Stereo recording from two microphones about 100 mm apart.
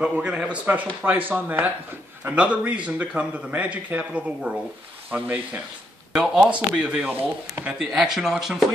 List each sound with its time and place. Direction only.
0.0 s a man's voice: 10° right (ahead or behind)